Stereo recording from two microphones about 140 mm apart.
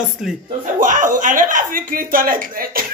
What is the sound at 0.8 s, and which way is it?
Speech, 65° right (ahead or behind).